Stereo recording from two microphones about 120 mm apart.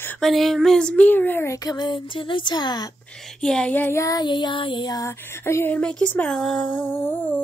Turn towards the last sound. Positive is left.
turn(degrees=15)  # may be behind; listen again after turning